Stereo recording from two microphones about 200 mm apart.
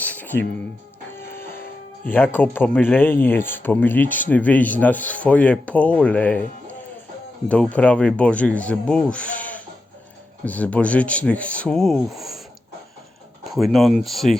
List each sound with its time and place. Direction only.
0.0 s music: 10° left (ahead or behind)
1.5 s music: 45° left (ahead or behind)
2.1 s speech: 10° left (ahead or behind)
7.4 s speech: 5° left (ahead or behind)
13.4 s speech: centre (ahead or behind)